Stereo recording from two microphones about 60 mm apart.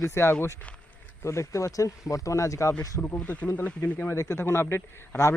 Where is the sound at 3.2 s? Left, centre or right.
Left.